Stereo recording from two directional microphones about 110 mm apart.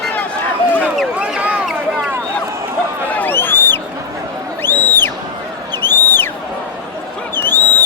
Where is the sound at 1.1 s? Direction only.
10° right (ahead or behind).